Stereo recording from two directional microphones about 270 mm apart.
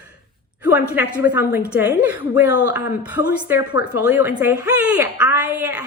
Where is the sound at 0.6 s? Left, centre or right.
Centre.